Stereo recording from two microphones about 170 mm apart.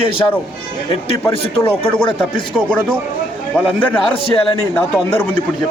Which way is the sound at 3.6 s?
10° left (ahead or behind).